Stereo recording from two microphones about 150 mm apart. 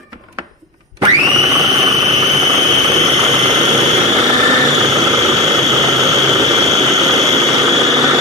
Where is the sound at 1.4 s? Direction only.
25° right (ahead or behind).